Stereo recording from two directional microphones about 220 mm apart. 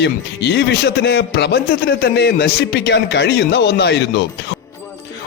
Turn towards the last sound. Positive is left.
turn(degrees=50)  # may be behind; listen again after turning